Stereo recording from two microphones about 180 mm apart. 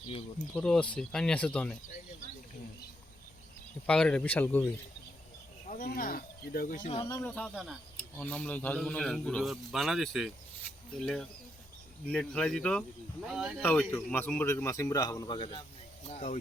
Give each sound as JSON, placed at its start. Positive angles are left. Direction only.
{"t": 0.5, "sound": "a man's voice", "side_deg": 5}
{"t": 3.8, "sound": "a man's voice", "side_deg": 5}
{"t": 5.8, "sound": "speech", "side_deg": 55}
{"t": 6.9, "sound": "speech", "side_deg": 30}
{"t": 7.3, "sound": "a man's voice", "side_deg": 5}
{"t": 13.6, "sound": "a man's voice", "side_deg": 10}
{"t": 16.0, "sound": "speech", "side_deg": 40}